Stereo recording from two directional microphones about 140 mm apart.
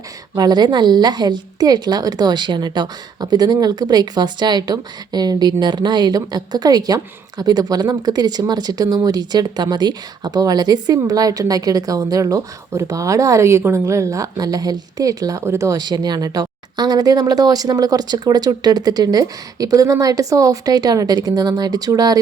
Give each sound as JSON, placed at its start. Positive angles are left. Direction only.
{"t": 0.3, "sound": "a woman's voice", "side_deg": -30}